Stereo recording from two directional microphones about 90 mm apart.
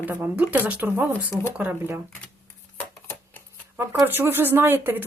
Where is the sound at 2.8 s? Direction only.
20° left (ahead or behind).